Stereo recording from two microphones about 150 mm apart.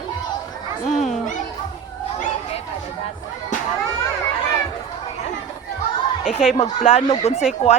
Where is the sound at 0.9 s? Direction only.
50° left (ahead or behind).